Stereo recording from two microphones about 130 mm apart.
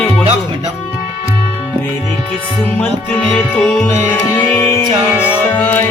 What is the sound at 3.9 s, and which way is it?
Music, 15° left (ahead or behind).